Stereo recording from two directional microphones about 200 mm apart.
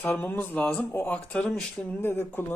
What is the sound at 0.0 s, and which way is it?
Speech, 10° left (ahead or behind).